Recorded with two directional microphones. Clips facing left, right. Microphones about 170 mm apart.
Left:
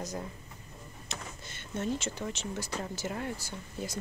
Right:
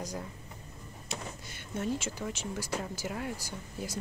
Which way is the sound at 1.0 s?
10° right (ahead or behind).